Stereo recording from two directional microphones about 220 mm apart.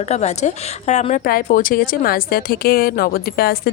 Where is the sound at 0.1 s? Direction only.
30° left (ahead or behind).